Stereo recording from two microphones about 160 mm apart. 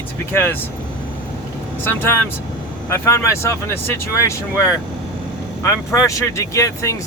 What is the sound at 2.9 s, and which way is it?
Speech, 15° left (ahead or behind).